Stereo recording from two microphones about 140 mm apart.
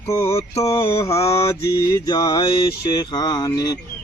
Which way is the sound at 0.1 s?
20° left (ahead or behind).